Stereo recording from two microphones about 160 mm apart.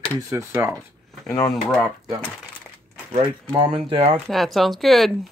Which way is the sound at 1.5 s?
5° left (ahead or behind).